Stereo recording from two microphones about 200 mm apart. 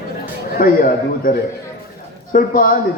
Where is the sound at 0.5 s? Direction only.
45° left (ahead or behind).